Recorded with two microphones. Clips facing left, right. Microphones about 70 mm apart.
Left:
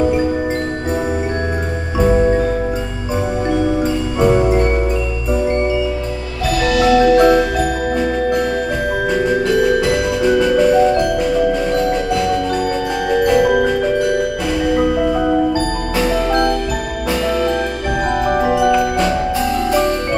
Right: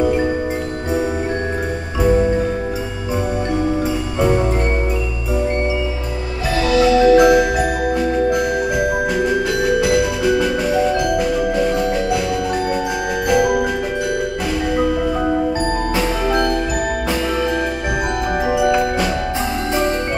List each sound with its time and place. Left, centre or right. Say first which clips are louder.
4.2 s music: left 4 dB; centre
6.6 s marimba: right 1 dB; right
6.9 s music: left 1 dB; left
7.2 s music: even; centre
9.6 s music: left 1 dB; centre
13.1 s music: left 4 dB; centre
18.5 s music: left 1 dB; centre